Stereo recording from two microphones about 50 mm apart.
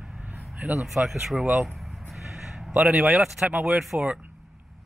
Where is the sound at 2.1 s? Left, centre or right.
Centre.